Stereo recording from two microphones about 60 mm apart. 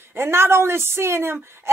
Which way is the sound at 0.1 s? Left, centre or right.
Right.